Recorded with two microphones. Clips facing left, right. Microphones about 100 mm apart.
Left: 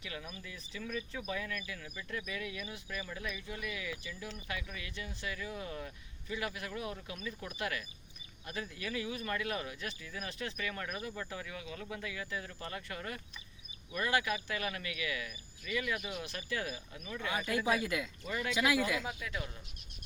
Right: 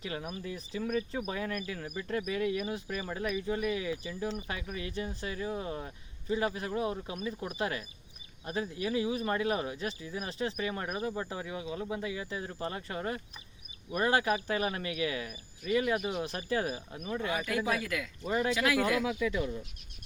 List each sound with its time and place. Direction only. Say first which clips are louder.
0.0 s speech: right 7 dB; 40° right (ahead or behind)
3.3 s speech: right 10 dB; 35° right (ahead or behind)
17.8 s speech: even; 20° left (ahead or behind)
18.3 s speech: right 9 dB; 30° right (ahead or behind)
18.5 s speech: left 3 dB; 15° left (ahead or behind)